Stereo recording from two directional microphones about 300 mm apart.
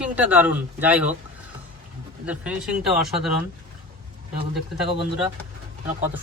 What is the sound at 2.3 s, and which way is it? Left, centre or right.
Speech, centre.